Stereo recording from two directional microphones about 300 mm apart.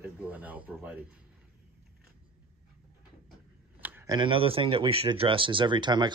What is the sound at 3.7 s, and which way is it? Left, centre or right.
Speech, centre.